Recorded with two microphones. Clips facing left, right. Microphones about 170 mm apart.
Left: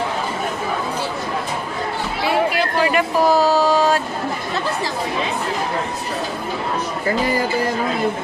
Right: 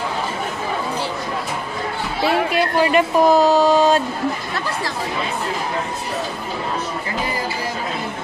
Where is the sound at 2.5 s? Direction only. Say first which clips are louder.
Right 2 dB; 25° right (ahead or behind).